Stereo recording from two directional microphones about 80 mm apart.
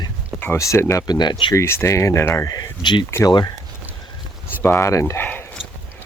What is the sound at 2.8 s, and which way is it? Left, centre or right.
Speech, left.